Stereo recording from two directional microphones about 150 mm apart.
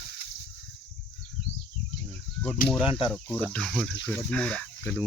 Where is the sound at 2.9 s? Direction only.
35° left (ahead or behind).